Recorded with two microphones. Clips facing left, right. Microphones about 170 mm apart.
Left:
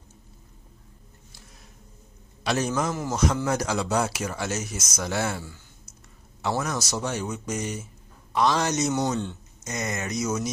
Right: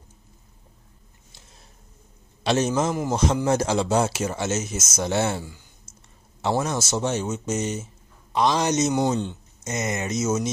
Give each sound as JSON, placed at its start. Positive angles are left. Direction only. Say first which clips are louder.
{"t": 2.4, "sound": "speech", "louder": "right 4 dB", "side_deg": -20}